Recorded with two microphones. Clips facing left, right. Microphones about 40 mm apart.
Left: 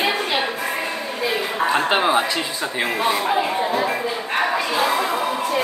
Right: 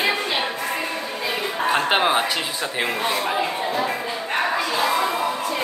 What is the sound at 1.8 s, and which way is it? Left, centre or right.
Speech, centre.